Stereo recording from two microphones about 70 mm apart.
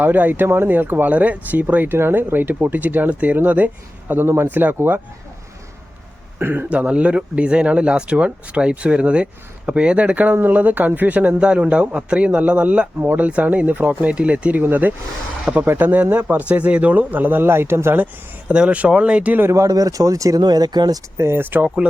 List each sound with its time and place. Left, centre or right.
0.0 s speech: right
6.4 s speech: right
6.7 s speech: centre; by 17.9 s right
17.9 s speech: right
19.5 s speech: right
20.4 s speech: right
21.2 s speech: right